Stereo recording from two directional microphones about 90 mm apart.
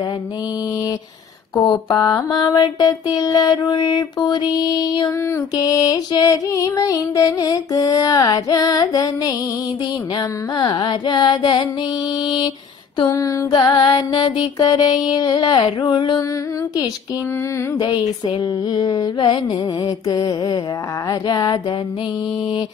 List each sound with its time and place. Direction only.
1.7 s mantra: 50° left (ahead or behind)
5.6 s music: 45° left (ahead or behind)
10.1 s mantra: 55° left (ahead or behind)
13.0 s music: 40° left (ahead or behind)
13.5 s mantra: 45° left (ahead or behind)
13.9 s mantra: 60° left (ahead or behind)
17.7 s mantra: 60° left (ahead or behind)
18.0 s mantra: 50° left (ahead or behind)